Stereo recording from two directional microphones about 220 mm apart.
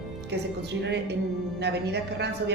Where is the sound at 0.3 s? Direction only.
50° right (ahead or behind).